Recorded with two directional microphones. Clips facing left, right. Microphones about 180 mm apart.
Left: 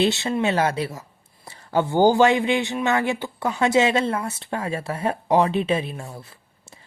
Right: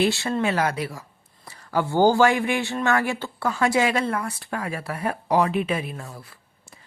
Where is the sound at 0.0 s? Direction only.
20° left (ahead or behind).